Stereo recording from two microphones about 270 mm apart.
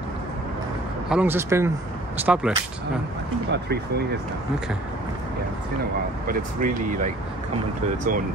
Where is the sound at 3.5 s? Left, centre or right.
Right.